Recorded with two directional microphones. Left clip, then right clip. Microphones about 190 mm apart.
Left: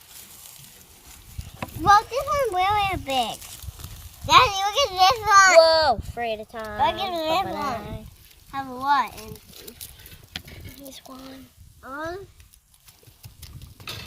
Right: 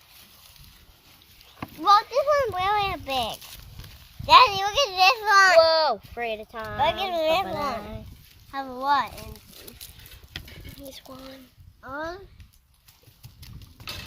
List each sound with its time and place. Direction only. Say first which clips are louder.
1.8 s a child's voice: left 1 dB; 50° right (ahead or behind)
5.6 s speech: left 3 dB; 20° right (ahead or behind)
6.7 s a child's voice: even; 45° right (ahead or behind)
8.4 s speech: left 1 dB; 35° right (ahead or behind)
9.6 s pig: left 2 dB; 10° left (ahead or behind)
10.9 s speech: left 1 dB; 10° right (ahead or behind)
11.8 s a child's voice: left 1 dB; 55° right (ahead or behind)